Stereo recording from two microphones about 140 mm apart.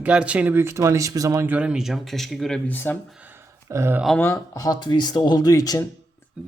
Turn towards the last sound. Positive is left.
turn(degrees=25)  # may be behind; listen again after turning